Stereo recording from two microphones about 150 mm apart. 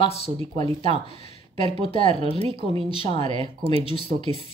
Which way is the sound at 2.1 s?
40° right (ahead or behind).